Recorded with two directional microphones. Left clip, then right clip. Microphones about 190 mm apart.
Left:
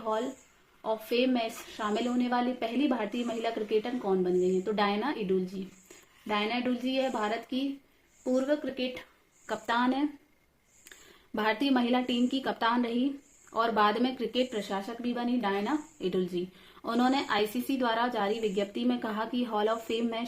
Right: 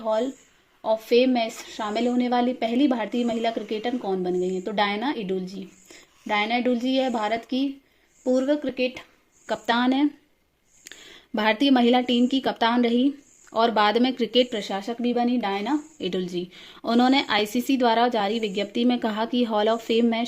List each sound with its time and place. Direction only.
0.8 s a woman's voice: 40° right (ahead or behind)
10.9 s a sound: 45° right (ahead or behind)
11.6 s speech: 50° right (ahead or behind)